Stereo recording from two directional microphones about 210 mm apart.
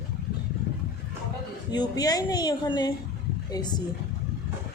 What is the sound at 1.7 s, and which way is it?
A woman's voice, 20° left (ahead or behind).